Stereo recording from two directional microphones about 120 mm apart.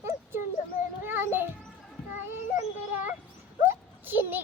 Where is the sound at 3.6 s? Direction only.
15° right (ahead or behind).